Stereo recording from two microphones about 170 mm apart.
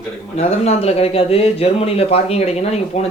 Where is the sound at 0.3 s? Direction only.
40° left (ahead or behind).